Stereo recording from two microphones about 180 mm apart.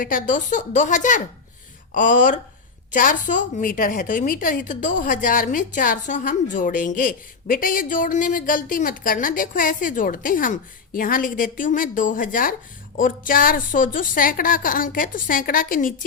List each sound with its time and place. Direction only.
0.0 s a woman's voice: 50° left (ahead or behind)